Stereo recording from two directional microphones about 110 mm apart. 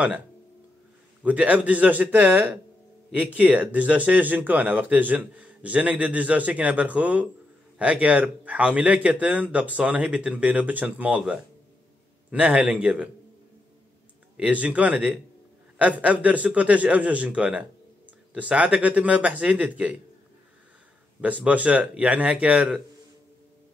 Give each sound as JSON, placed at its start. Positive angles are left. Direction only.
{"t": 1.2, "sound": "speech", "side_deg": -10}
{"t": 14.3, "sound": "speech", "side_deg": -10}
{"t": 21.5, "sound": "speech", "side_deg": -10}